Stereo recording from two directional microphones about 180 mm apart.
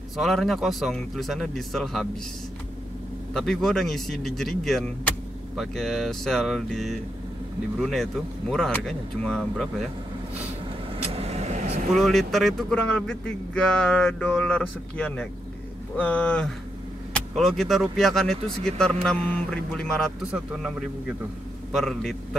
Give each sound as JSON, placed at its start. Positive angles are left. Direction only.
{"t": 0.2, "sound": "speech", "side_deg": 0}
{"t": 3.3, "sound": "speech", "side_deg": 5}
{"t": 11.0, "sound": "vehicle", "side_deg": -35}
{"t": 11.9, "sound": "speech", "side_deg": 0}
{"t": 21.7, "sound": "speech", "side_deg": 0}